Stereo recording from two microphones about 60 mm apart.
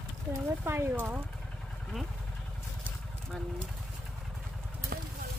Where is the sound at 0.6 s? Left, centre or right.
Right.